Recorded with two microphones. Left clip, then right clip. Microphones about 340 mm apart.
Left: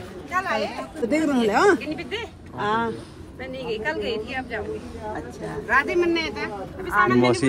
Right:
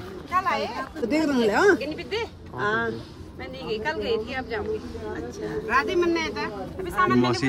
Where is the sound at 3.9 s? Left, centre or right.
Right.